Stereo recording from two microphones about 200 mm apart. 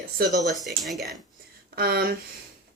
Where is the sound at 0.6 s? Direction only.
Centre (ahead or behind).